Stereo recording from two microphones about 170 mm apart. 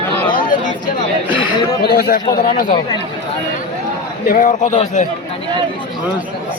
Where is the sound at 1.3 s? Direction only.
30° left (ahead or behind).